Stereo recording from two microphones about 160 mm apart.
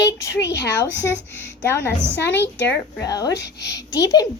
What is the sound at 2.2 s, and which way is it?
Speech, 90° left.